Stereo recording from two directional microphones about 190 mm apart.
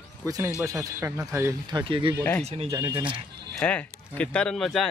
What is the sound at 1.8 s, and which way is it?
Speech, 25° right (ahead or behind).